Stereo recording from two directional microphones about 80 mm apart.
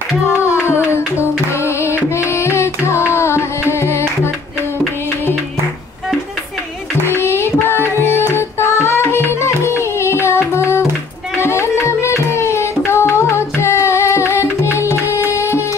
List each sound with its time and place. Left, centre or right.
0.3 s music: centre
0.8 s music: left
7.1 s child singing: left
7.6 s music: left